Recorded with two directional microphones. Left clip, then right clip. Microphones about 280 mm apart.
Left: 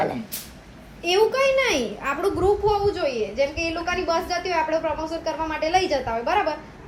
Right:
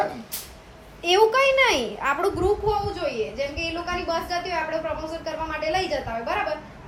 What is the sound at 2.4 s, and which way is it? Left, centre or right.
A woman's voice, left.